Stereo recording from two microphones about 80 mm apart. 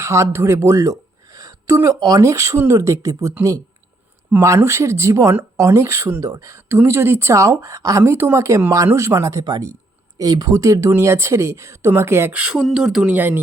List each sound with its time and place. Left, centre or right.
0.0 s speech: right
4.4 s speech: right
12.3 s speech: centre
12.5 s speech: centre
13.1 s speech: right